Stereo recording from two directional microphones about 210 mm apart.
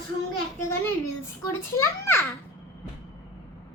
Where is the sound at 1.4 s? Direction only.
10° left (ahead or behind).